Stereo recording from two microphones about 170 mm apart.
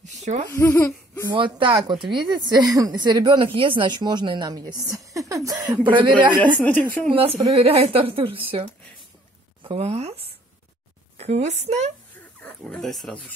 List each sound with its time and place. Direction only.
0.0 s a sound: 45° right (ahead or behind)
0.5 s speech: 15° left (ahead or behind)
1.2 s a woman's voice: 30° right (ahead or behind)
6.4 s a woman's voice: 10° left (ahead or behind)
7.1 s a woman's voice: 35° right (ahead or behind)
12.4 s speech: 10° left (ahead or behind)